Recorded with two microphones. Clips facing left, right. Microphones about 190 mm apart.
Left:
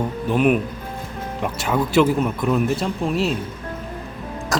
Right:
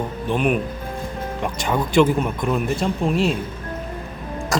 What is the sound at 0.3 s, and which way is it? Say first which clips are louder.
Speech: left 3 dB; 5° left (ahead or behind).